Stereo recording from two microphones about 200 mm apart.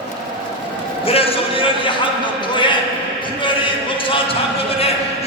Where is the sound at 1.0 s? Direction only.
30° left (ahead or behind).